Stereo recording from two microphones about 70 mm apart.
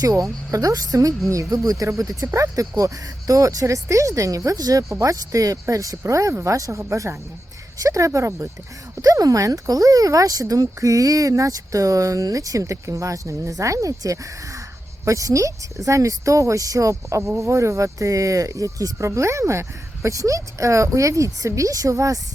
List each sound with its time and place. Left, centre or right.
0.0 s speech: right
9.0 s speech: right